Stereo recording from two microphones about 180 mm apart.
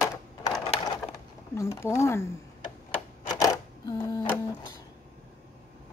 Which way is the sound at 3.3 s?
20° left (ahead or behind).